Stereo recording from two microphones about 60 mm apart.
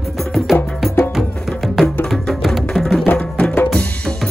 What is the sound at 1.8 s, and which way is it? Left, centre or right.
Music, centre.